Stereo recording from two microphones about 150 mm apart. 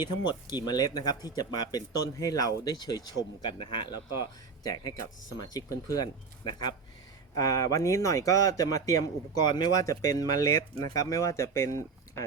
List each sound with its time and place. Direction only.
0.0 s speech: 30° left (ahead or behind)